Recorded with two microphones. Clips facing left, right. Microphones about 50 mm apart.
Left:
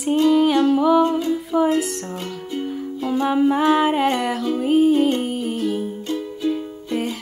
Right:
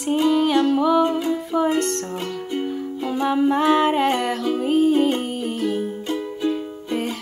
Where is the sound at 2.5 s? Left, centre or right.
Centre.